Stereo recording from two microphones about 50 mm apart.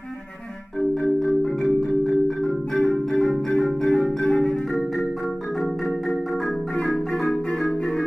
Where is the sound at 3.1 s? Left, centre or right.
Centre.